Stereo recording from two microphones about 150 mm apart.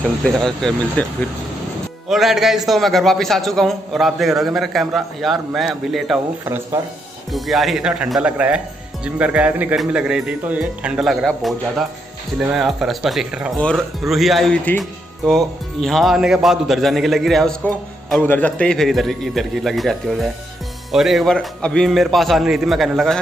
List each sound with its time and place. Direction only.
0.2 s speech: 5° left (ahead or behind)
2.0 s speech: centre (ahead or behind)
6.4 s speech: 15° right (ahead or behind)
7.3 s speech: centre (ahead or behind)